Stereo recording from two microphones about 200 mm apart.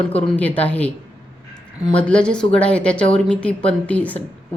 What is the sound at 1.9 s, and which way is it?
A woman's voice, 5° left (ahead or behind).